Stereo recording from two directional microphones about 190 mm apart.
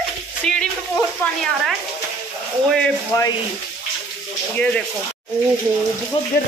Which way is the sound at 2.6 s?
5° left (ahead or behind).